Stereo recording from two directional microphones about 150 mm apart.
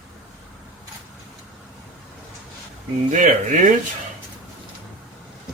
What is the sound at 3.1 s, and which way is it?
Speech, 55° right (ahead or behind).